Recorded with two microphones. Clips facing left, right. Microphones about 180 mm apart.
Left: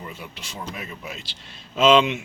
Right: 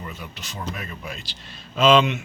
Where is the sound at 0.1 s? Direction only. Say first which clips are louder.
Even; 30° left (ahead or behind).